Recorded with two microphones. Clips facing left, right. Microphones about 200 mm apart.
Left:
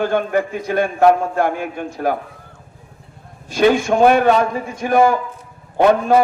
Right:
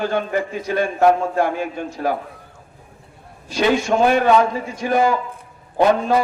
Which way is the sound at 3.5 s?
50° left (ahead or behind).